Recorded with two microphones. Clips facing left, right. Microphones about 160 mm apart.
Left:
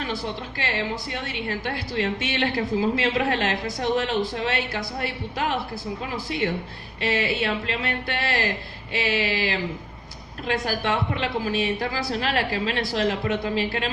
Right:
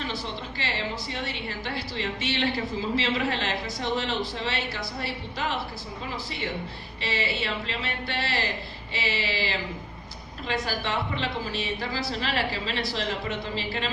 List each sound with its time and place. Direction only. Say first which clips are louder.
0.1 s a woman's voice: left 4 dB; 50° left (ahead or behind)
7.0 s a woman's voice: left 6 dB; 50° left (ahead or behind)